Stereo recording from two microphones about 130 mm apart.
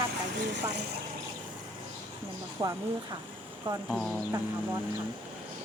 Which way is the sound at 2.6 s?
30° right (ahead or behind).